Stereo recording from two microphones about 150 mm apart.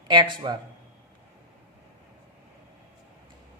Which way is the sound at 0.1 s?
30° right (ahead or behind).